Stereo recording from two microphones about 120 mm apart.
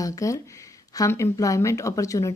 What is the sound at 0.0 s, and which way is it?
A woman's voice, 30° left (ahead or behind).